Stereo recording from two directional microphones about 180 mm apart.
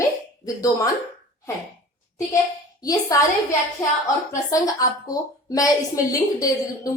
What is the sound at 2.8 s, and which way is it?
Speech, 20° left (ahead or behind).